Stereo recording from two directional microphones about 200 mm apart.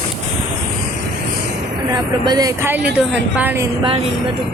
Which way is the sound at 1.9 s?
20° right (ahead or behind).